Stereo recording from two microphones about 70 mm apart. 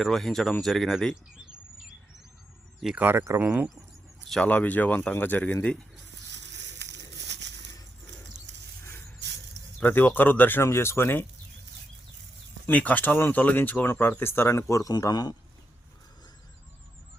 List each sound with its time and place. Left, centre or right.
0.0 s speech: centre
2.9 s speech: right
4.4 s speech: left
9.8 s speech: left
12.6 s speech: left
14.7 s a man's voice: left
15.0 s a man's voice: left